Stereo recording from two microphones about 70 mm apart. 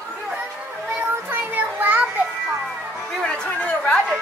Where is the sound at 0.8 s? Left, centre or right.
Right.